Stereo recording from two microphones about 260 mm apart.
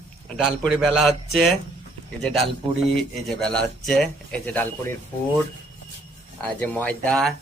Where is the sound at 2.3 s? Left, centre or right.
Right.